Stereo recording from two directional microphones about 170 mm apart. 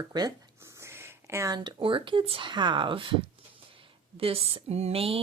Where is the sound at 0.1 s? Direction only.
25° right (ahead or behind).